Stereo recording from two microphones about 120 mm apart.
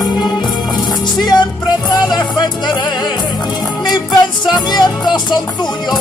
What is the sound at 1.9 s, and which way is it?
Music, 35° left (ahead or behind).